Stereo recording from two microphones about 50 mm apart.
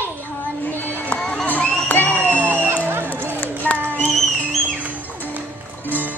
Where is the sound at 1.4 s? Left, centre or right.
Left.